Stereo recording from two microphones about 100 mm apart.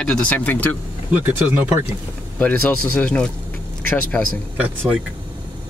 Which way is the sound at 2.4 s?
15° left (ahead or behind).